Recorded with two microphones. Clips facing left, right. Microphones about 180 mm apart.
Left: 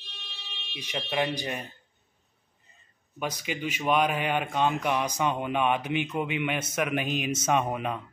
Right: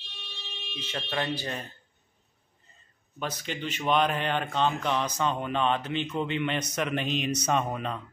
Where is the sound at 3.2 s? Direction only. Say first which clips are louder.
Left 2 dB; 10° left (ahead or behind).